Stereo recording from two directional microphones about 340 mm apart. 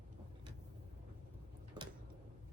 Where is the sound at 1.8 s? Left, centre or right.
Centre.